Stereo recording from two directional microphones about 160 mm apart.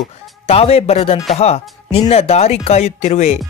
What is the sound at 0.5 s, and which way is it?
Speech, 40° left (ahead or behind).